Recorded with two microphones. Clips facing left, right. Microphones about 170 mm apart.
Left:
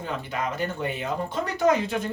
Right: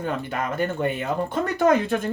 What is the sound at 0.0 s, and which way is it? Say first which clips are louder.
Speech: right 3 dB; 55° right (ahead or behind).